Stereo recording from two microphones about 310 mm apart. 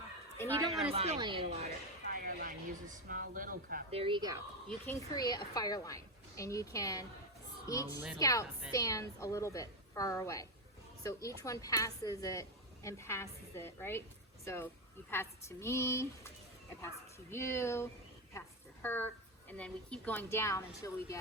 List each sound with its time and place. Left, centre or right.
0.3 s a sound: centre
0.9 s speech: centre
2.0 s speech: right
4.0 s speech: centre
4.7 s a woman's voice: centre
8.2 s a woman's voice: centre
17.3 s a woman's voice: centre